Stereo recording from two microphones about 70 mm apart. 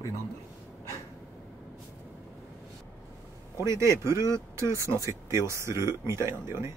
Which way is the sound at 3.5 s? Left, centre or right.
Right.